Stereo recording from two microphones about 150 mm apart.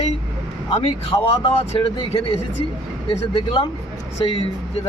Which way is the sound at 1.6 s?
40° left (ahead or behind).